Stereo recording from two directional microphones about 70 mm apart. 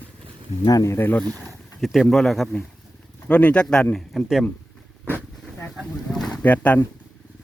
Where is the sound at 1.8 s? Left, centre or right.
Centre.